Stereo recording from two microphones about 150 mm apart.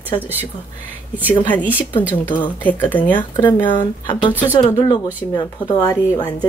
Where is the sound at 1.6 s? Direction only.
10° right (ahead or behind).